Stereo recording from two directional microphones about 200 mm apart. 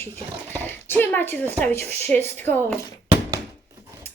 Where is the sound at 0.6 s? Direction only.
10° left (ahead or behind).